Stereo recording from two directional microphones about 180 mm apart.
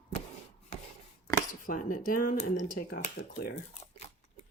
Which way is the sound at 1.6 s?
50° left (ahead or behind).